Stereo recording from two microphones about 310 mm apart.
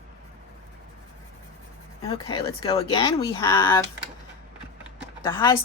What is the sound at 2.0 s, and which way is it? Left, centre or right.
Speech, centre.